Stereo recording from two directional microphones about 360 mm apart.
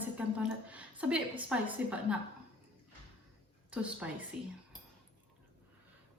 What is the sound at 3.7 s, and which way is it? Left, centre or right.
Speech, centre.